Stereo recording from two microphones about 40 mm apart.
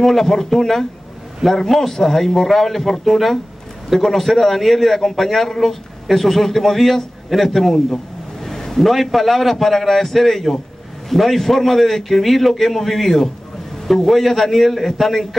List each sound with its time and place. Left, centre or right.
0.0 s a man's voice: centre